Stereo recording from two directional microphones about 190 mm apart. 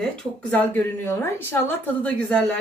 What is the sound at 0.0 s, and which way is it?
Speech, 5° left (ahead or behind).